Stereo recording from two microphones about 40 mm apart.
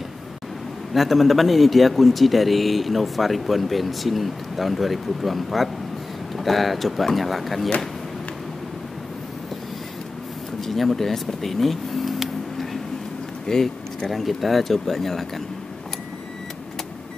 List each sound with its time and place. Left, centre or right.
0.9 s speech: centre
10.6 s vehicle: centre
13.5 s speech: centre